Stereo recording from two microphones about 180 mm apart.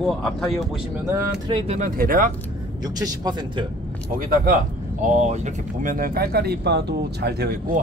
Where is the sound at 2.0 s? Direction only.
50° right (ahead or behind).